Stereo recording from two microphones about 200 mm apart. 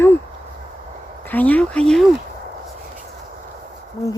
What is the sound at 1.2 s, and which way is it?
Gasp, 10° left (ahead or behind).